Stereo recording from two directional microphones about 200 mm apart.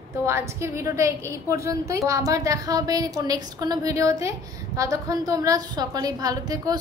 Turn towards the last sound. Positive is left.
turn(degrees=-20)  # may be behind; listen again after turning